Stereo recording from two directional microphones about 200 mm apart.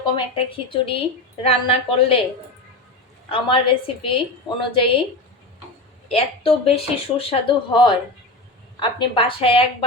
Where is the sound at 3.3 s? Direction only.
25° left (ahead or behind).